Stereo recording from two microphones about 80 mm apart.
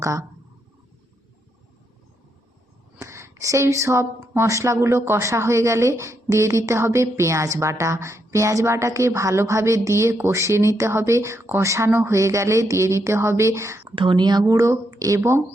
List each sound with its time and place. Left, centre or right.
0.0 s speech: right
3.0 s speech: right
13.9 s speech: right
14.4 s speech: right